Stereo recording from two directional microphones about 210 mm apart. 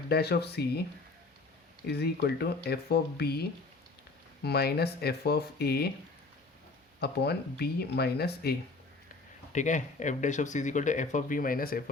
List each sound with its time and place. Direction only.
0.1 s speech: 50° left (ahead or behind)
1.9 s speech: 50° left (ahead or behind)
4.4 s speech: 50° left (ahead or behind)
7.0 s speech: 50° left (ahead or behind)
9.5 s speech: 35° left (ahead or behind)